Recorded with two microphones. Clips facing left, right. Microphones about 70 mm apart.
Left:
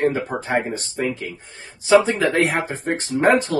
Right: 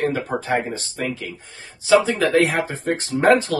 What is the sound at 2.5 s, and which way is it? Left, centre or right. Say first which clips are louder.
Speech: right 1 dB; left.